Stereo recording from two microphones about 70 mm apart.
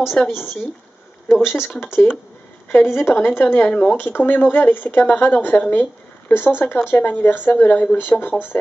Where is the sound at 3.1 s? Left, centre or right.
Left.